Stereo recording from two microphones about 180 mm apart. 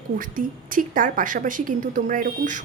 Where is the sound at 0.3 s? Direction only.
50° right (ahead or behind).